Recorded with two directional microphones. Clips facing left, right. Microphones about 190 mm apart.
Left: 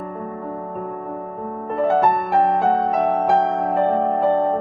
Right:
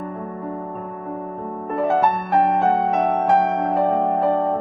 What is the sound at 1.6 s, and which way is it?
Music, centre (ahead or behind).